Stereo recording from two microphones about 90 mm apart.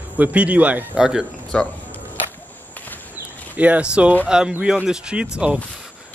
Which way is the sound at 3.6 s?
15° right (ahead or behind).